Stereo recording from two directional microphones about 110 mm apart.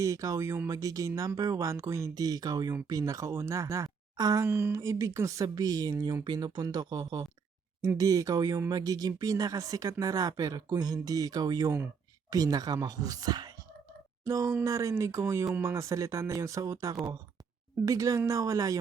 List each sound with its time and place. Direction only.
0.0 s speech: 30° right (ahead or behind)
4.4 s speech: 20° right (ahead or behind)